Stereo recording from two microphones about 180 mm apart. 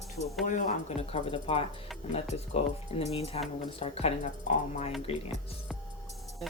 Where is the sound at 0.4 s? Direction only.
45° left (ahead or behind).